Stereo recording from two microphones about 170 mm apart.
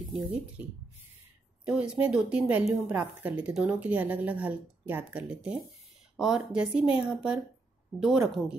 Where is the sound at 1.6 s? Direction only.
5° right (ahead or behind).